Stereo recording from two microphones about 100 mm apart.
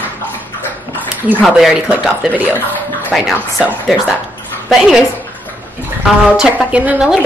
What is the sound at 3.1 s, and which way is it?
Speech, 5° right (ahead or behind).